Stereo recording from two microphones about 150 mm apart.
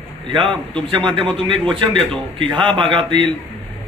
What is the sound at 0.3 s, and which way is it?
A man's voice, 35° right (ahead or behind).